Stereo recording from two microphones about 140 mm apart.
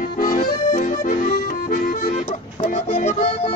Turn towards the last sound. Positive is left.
turn(degrees=45)  # may be behind; listen again after turning